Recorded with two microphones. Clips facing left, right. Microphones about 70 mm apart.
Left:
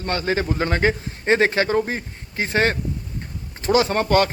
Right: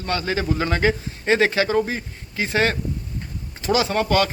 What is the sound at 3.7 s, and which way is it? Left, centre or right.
Speech, left.